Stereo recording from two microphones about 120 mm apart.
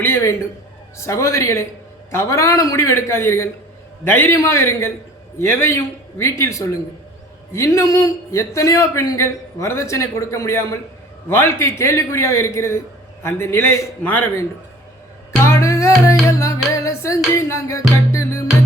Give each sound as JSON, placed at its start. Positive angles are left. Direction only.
{"t": 0.0, "sound": "a sound", "side_deg": 20}
{"t": 0.9, "sound": "a man's voice", "side_deg": 25}
{"t": 15.4, "sound": "music", "side_deg": 25}